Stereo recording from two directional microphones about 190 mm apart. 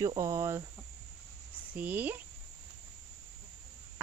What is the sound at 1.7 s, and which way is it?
Speech, 10° right (ahead or behind).